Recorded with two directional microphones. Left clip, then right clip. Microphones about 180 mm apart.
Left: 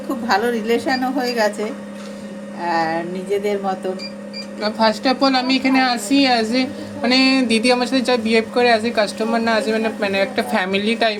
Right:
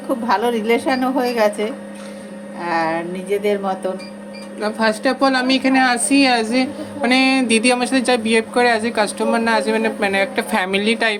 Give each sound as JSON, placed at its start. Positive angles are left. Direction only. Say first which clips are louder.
{"t": 0.3, "sound": "a woman's voice", "louder": "even", "side_deg": -45}
{"t": 2.6, "sound": "a woman's voice", "louder": "even", "side_deg": -45}
{"t": 4.6, "sound": "a woman's voice", "louder": "left 1 dB", "side_deg": -10}